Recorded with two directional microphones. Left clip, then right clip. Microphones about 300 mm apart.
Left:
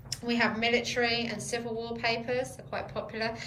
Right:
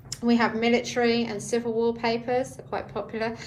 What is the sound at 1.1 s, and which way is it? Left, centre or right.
A woman's voice, right.